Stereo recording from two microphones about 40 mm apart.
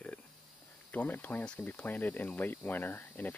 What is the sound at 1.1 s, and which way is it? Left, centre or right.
Speech, left.